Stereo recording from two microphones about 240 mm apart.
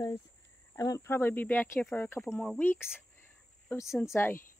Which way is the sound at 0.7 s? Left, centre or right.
Centre.